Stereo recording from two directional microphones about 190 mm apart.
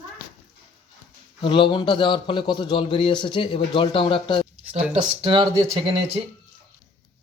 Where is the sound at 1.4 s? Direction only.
25° left (ahead or behind).